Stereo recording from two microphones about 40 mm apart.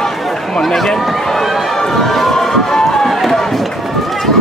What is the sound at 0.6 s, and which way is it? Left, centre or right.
Speech, centre.